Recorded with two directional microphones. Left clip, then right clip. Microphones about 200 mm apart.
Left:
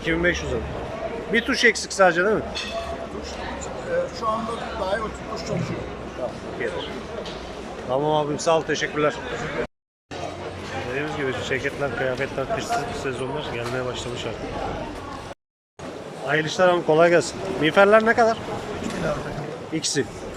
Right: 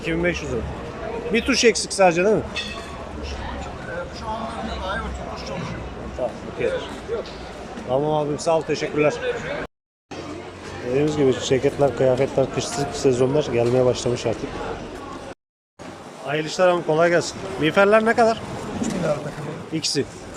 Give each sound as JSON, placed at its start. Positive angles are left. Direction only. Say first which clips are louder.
{"t": 0.0, "sound": "speech", "louder": "left 1 dB", "side_deg": 0}
{"t": 7.9, "sound": "speech", "louder": "right 1 dB", "side_deg": -5}
{"t": 10.9, "sound": "speech", "louder": "right 8 dB", "side_deg": -20}
{"t": 16.2, "sound": "speech", "louder": "even", "side_deg": -5}
{"t": 19.7, "sound": "speech", "louder": "right 1 dB", "side_deg": -5}